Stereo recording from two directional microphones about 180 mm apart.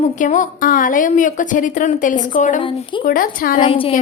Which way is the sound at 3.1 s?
50° left (ahead or behind).